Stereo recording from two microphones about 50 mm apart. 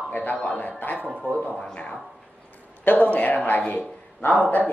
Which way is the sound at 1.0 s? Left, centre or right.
Right.